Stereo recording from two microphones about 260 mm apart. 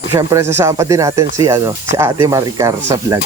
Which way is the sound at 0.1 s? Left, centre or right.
Centre.